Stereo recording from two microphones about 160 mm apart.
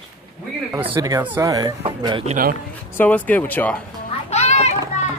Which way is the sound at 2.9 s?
10° left (ahead or behind).